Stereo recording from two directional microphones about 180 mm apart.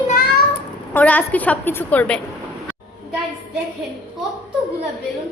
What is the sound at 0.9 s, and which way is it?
A woman's voice, 10° left (ahead or behind).